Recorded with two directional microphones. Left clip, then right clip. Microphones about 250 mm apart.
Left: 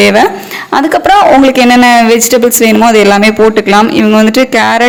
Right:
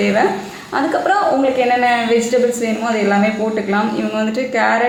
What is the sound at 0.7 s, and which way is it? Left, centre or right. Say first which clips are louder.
Speech: left 9 dB; left.